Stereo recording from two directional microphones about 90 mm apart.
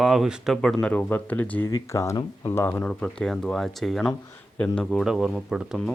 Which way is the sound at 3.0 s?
5° left (ahead or behind).